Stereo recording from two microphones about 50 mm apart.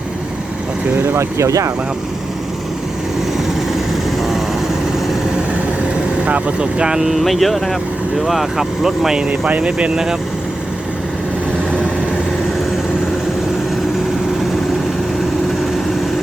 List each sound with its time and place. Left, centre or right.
1.0 s speech: right
6.2 s speech: right
7.2 s speech: centre